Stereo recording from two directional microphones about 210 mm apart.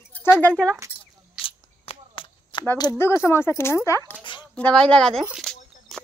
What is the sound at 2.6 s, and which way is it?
Speech, 15° left (ahead or behind).